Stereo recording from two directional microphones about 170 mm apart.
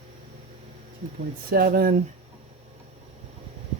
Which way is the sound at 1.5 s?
60° right (ahead or behind).